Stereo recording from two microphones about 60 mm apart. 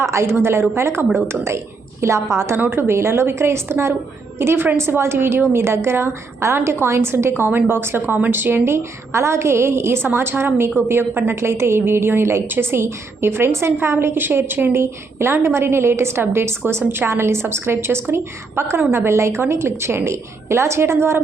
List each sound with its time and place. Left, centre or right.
0.0 s a woman's voice: right
2.6 s a woman's voice: right